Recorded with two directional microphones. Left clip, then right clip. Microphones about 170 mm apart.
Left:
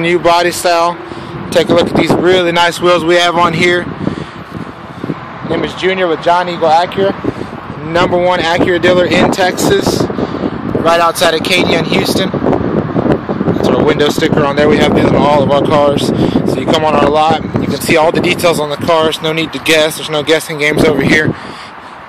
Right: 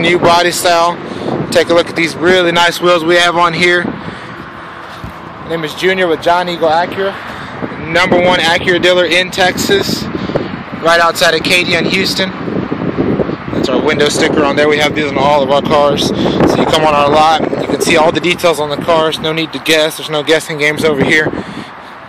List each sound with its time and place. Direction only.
0.0 s speech: 5° left (ahead or behind)
5.5 s speech: centre (ahead or behind)
7.9 s speech: 20° left (ahead or behind)
8.3 s speech: 5° left (ahead or behind)
13.6 s speech: 5° left (ahead or behind)